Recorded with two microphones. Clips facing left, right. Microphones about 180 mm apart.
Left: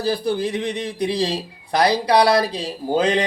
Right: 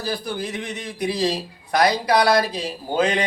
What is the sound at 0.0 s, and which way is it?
A man's voice, 30° left (ahead or behind).